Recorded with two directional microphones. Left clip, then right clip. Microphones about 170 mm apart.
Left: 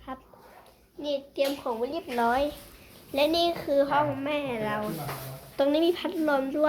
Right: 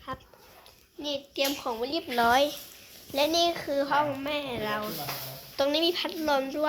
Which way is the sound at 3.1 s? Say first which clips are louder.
Left 1 dB; 5° right (ahead or behind).